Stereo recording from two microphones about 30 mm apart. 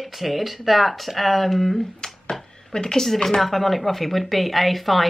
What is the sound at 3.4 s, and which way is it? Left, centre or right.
Speech, centre.